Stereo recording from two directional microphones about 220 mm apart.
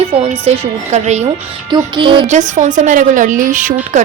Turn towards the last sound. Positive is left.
turn(degrees=-35)  # may be behind; listen again after turning